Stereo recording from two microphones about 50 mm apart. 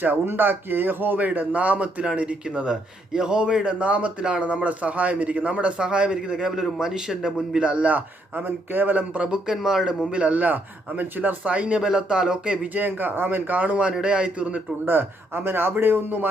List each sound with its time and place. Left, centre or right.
0.0 s a man's voice: right; by 7.7 s centre
7.7 s a man's voice: right
9.6 s speech: centre
10.1 s a man's voice: right
12.7 s a man's voice: right
14.8 s a man's voice: right